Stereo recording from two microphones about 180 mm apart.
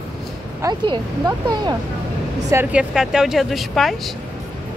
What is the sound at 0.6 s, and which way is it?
Speech, 20° right (ahead or behind).